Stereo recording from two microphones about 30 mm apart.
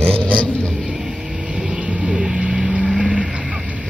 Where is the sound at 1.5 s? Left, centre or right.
Right.